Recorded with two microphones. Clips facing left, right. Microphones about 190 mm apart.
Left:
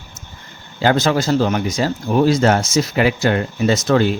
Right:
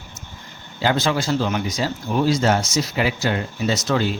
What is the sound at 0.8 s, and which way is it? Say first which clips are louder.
Speech: left 4 dB; 50° left (ahead or behind).